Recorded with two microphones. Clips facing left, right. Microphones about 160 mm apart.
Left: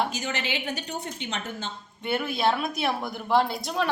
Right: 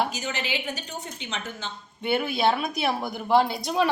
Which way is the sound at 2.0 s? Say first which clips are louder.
Right 2 dB; centre (ahead or behind).